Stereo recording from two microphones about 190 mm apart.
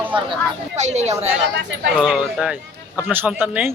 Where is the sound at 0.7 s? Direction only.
35° right (ahead or behind).